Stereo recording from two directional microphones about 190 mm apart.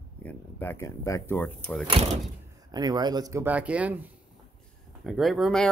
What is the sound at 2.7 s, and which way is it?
Speech, 20° right (ahead or behind).